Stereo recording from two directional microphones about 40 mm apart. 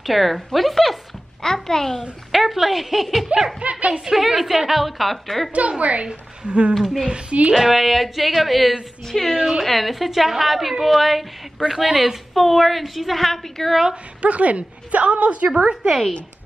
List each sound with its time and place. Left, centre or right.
0.0 s a woman's voice: centre
1.4 s a child's voice: centre
2.0 s a woman's voice: centre
3.3 s a woman's voice: right
3.9 s a woman's voice: centre
5.5 s a woman's voice: right
6.7 s a woman's voice: centre
7.1 s a woman's voice: right
7.5 s a woman's voice: centre
9.0 s a woman's voice: centre
14.2 s a woman's voice: right
15.7 s speech: centre